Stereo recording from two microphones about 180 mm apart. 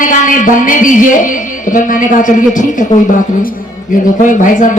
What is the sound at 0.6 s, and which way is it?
Speech, 45° left (ahead or behind).